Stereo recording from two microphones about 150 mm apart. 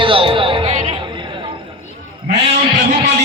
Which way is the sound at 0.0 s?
35° right (ahead or behind).